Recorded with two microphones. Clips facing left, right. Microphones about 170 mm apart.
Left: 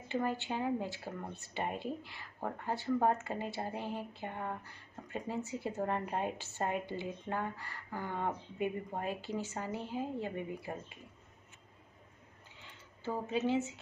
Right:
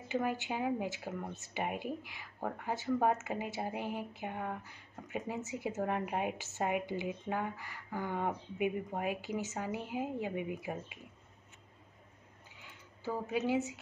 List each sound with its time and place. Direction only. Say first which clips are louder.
0.1 s speech: even; 10° right (ahead or behind)
12.6 s a sound: even; 10° right (ahead or behind)
13.5 s speech: even; 15° right (ahead or behind)